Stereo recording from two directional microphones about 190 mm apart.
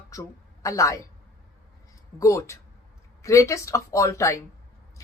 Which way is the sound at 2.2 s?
15° left (ahead or behind).